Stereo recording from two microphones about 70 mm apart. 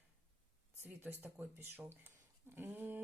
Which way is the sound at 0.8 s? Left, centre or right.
Right.